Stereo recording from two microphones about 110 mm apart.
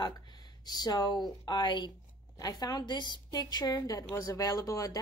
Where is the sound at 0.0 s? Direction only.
40° left (ahead or behind).